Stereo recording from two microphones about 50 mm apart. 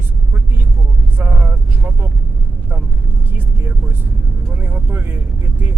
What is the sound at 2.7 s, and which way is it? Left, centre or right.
Speech, right.